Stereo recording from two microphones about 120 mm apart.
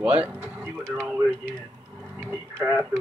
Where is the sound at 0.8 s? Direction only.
25° right (ahead or behind).